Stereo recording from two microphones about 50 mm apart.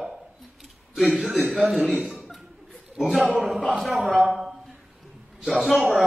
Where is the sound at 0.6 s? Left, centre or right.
Centre.